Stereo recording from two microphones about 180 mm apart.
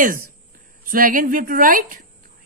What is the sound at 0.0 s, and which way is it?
A woman's voice, 50° right (ahead or behind).